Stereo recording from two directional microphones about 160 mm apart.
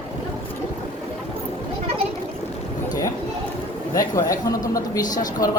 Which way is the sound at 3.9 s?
20° left (ahead or behind).